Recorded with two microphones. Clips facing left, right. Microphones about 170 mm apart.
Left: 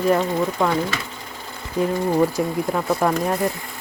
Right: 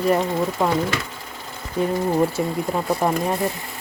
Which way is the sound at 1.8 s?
5° right (ahead or behind).